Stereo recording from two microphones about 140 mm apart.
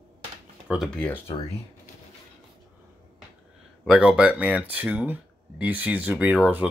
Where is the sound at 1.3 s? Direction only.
25° left (ahead or behind).